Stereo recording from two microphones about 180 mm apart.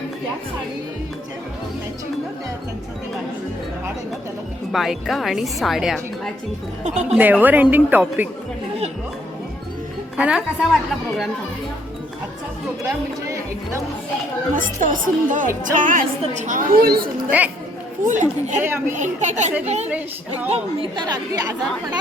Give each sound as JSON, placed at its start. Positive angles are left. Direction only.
{"t": 4.7, "sound": "a woman's voice", "side_deg": 0}
{"t": 6.8, "sound": "a woman's voice", "side_deg": -40}
{"t": 7.2, "sound": "a woman's voice", "side_deg": -10}
{"t": 10.2, "sound": "a woman's voice", "side_deg": -5}
{"t": 13.2, "sound": "music", "side_deg": -15}
{"t": 14.5, "sound": "a woman's voice", "side_deg": -45}
{"t": 17.2, "sound": "speech", "side_deg": -10}
{"t": 18.0, "sound": "a woman's voice", "side_deg": -45}
{"t": 18.6, "sound": "a woman's voice", "side_deg": -15}
{"t": 18.9, "sound": "a woman's voice", "side_deg": -40}
{"t": 20.9, "sound": "speech", "side_deg": -20}